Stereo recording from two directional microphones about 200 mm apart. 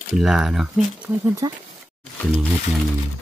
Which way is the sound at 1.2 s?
15° right (ahead or behind).